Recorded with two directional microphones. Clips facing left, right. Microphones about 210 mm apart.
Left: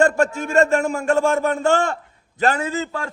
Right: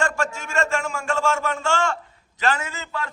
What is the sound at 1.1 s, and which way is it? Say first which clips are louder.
Speech: left 5 dB; 55° left (ahead or behind).